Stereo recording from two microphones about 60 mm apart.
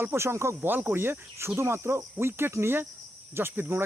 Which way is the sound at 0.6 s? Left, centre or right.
Right.